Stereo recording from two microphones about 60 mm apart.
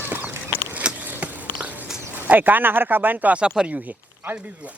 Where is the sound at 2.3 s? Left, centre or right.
Right.